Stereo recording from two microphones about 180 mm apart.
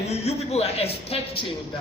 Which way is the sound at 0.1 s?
35° left (ahead or behind).